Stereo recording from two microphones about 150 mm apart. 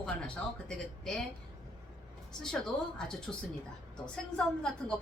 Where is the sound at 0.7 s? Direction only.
5° left (ahead or behind).